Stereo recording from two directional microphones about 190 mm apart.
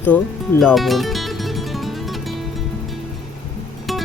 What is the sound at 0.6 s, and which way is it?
Music, centre (ahead or behind).